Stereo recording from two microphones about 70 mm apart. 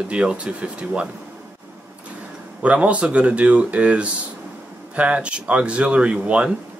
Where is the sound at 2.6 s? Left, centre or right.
Centre.